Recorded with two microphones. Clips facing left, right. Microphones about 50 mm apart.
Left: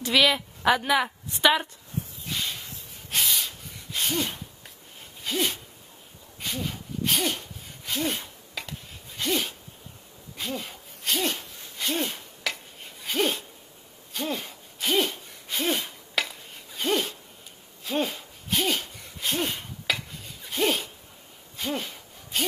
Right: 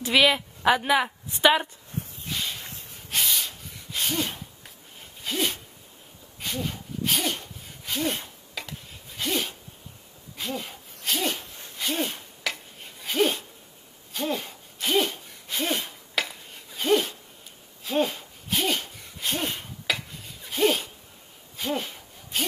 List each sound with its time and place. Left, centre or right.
0.0 s a woman's voice: centre
0.6 s a woman's voice: centre
2.2 s snort: centre
2.6 s snort: right
3.1 s a sound: centre